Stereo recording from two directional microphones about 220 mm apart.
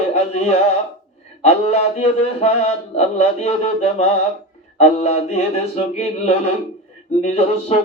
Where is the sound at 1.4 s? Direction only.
30° left (ahead or behind).